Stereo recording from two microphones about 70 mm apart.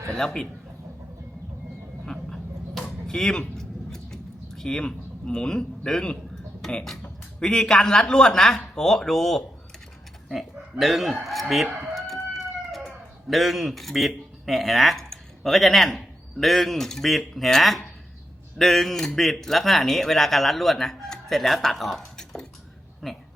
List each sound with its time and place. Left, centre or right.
0.1 s a man's voice: centre
2.0 s a sound: centre
6.6 s speech: centre
10.2 s chicken: centre
13.2 s speech: centre